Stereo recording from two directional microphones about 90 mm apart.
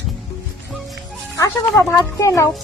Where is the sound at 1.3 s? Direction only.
35° left (ahead or behind).